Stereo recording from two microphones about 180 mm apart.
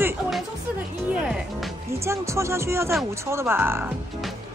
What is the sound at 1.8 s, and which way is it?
Speech, 15° right (ahead or behind).